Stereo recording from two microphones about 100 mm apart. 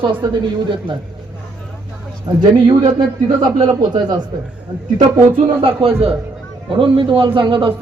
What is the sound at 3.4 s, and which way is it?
Speech, 45° right (ahead or behind).